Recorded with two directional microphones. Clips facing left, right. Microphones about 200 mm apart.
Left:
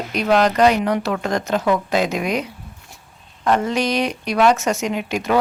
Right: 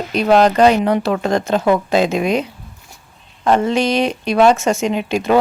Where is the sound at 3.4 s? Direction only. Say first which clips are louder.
Right 4 dB; 25° right (ahead or behind).